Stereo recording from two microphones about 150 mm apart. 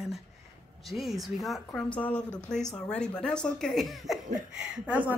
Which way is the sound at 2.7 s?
5° left (ahead or behind).